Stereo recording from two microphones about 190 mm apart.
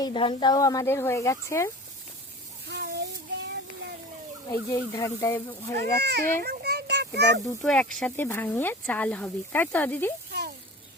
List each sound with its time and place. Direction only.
0.0 s speech: 25° left (ahead or behind)
2.6 s child singing: 60° right (ahead or behind)
4.7 s speech: 15° left (ahead or behind)
6.0 s a child's voice: 60° right (ahead or behind)
6.4 s a sound: 55° right (ahead or behind)
7.6 s speech: 5° left (ahead or behind)